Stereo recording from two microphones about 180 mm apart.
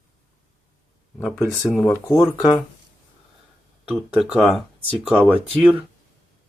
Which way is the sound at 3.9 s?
5° right (ahead or behind).